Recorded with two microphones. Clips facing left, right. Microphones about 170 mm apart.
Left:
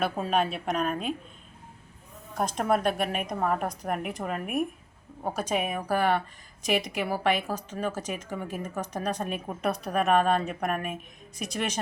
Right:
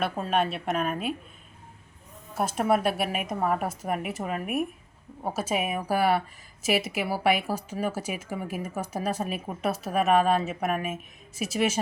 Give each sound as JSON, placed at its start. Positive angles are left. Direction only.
{"t": 0.0, "sound": "a woman's voice", "side_deg": 0}
{"t": 2.3, "sound": "a woman's voice", "side_deg": -5}